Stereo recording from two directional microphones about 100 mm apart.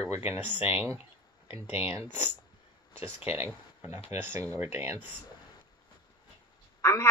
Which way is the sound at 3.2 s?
25° right (ahead or behind).